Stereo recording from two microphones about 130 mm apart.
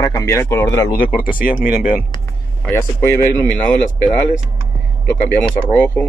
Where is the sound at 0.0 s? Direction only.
25° left (ahead or behind).